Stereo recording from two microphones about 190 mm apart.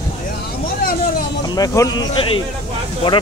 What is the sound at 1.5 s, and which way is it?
Speech, 20° left (ahead or behind).